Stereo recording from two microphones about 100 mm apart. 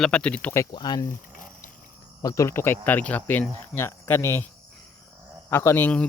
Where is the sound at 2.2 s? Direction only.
30° left (ahead or behind).